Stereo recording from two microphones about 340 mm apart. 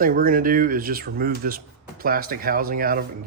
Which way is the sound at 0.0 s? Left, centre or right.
Right.